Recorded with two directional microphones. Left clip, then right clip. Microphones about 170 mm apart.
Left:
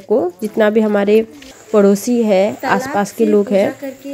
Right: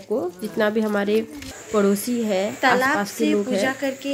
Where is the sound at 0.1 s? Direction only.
20° left (ahead or behind).